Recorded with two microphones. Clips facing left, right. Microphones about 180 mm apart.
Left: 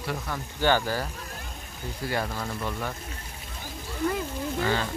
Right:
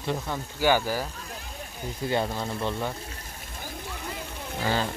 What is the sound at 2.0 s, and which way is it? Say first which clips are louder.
Speech: right 3 dB; 20° right (ahead or behind).